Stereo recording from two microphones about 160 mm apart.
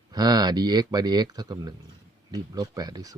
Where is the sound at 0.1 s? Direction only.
25° right (ahead or behind).